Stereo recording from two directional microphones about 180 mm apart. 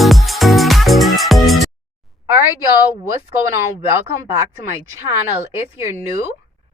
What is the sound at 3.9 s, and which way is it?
Speech, 15° right (ahead or behind).